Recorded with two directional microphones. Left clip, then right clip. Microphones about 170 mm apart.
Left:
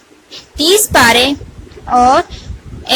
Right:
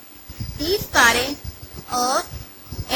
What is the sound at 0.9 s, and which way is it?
Speech, 40° left (ahead or behind).